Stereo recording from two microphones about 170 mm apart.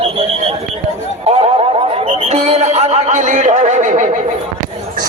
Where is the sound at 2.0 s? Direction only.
40° right (ahead or behind).